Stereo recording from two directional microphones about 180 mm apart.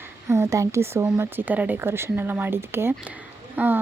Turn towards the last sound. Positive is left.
turn(degrees=-10)  # may be behind; listen again after turning